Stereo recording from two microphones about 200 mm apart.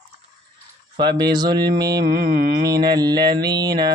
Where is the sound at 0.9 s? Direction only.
20° right (ahead or behind).